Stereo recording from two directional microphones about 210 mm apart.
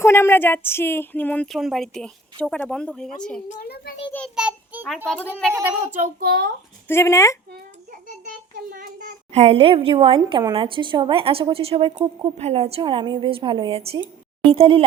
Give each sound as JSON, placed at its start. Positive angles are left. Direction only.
{"t": 0.0, "sound": "speech", "side_deg": 10}
{"t": 3.5, "sound": "a child's voice", "side_deg": 45}
{"t": 4.4, "sound": "a child's voice", "side_deg": -5}
{"t": 5.0, "sound": "speech", "side_deg": 5}
{"t": 6.0, "sound": "a child's voice", "side_deg": -45}
{"t": 6.8, "sound": "speech", "side_deg": 10}
{"t": 8.7, "sound": "a child's voice", "side_deg": -40}
{"t": 9.3, "sound": "a woman's voice", "side_deg": -30}